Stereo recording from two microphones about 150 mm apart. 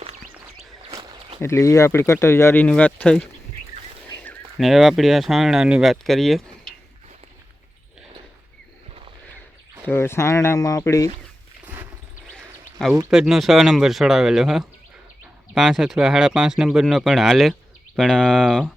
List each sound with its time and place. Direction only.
1.4 s speech: 20° left (ahead or behind)
4.5 s speech: centre (ahead or behind)
9.8 s speech: 15° left (ahead or behind)
13.1 s speech: 5° right (ahead or behind)